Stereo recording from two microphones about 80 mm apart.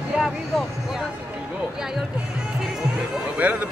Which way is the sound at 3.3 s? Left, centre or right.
Centre.